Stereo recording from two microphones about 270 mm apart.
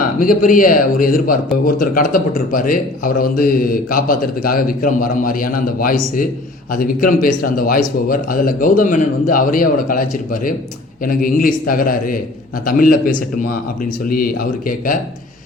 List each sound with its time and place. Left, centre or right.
0.2 s a man's voice: left